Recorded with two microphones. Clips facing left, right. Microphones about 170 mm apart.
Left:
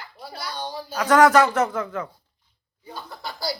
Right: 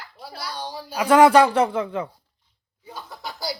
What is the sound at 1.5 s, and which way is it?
Speech, 30° right (ahead or behind).